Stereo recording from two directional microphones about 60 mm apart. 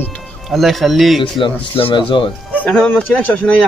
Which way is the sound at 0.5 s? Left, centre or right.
Centre.